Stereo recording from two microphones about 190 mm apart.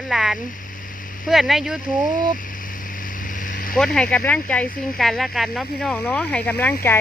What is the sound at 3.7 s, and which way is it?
Speech, 5° left (ahead or behind).